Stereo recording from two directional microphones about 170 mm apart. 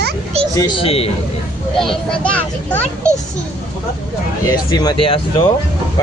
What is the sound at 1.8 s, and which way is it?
Speech, 5° left (ahead or behind).